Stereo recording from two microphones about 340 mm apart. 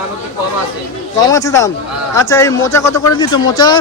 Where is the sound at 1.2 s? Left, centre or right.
Centre.